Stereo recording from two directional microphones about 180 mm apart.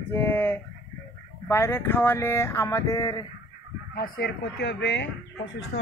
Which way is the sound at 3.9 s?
60° left (ahead or behind).